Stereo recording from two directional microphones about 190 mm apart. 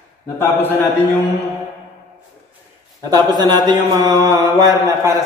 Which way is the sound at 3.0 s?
20° right (ahead or behind).